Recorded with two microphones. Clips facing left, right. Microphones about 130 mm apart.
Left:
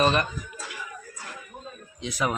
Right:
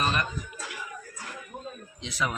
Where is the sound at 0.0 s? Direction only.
25° left (ahead or behind).